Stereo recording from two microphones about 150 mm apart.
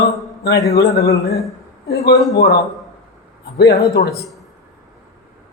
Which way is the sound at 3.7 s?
20° left (ahead or behind).